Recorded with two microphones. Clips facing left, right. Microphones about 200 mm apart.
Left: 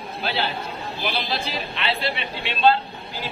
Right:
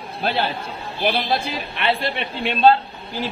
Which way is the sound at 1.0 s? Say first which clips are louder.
Right 7 dB; 50° right (ahead or behind).